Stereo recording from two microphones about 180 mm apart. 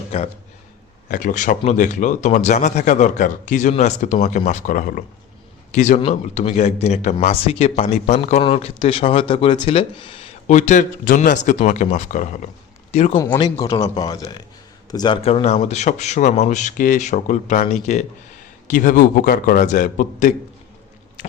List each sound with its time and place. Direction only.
1.0 s speech: 45° left (ahead or behind)
13.4 s speech: 20° left (ahead or behind); by 20.3 s 45° left (ahead or behind)